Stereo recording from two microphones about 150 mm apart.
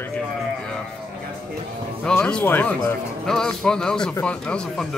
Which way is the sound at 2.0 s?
5° left (ahead or behind).